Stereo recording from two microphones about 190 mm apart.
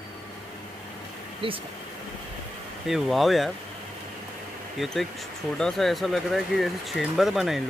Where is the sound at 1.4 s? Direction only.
30° right (ahead or behind).